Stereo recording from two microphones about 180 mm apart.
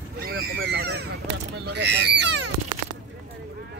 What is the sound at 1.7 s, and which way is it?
Speech, 70° right (ahead or behind).